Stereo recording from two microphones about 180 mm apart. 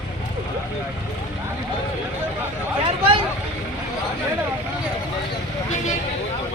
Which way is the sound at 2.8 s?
30° right (ahead or behind).